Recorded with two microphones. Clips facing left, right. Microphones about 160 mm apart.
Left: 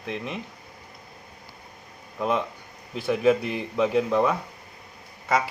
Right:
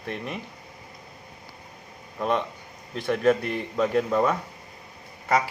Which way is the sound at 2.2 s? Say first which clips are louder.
Even; 5° left (ahead or behind).